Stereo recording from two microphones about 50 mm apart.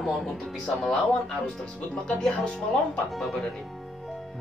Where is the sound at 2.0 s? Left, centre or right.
Centre.